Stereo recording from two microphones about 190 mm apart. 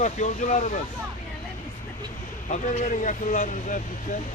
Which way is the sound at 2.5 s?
40° left (ahead or behind).